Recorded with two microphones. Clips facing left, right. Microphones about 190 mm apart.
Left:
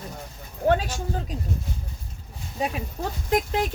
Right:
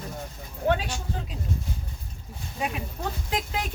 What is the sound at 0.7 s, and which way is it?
Speech, 40° left (ahead or behind).